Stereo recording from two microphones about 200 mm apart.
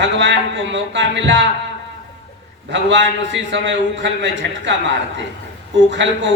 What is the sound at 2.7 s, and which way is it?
A man's voice, 65° right (ahead or behind).